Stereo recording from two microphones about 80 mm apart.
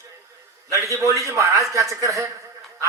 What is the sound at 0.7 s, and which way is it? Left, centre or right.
A man's voice, right.